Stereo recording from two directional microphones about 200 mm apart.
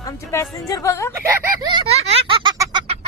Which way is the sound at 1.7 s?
30° right (ahead or behind).